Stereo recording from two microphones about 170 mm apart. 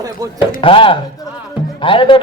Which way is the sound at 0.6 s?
30° left (ahead or behind).